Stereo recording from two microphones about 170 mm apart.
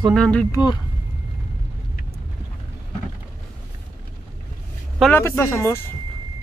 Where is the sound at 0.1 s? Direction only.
5° left (ahead or behind).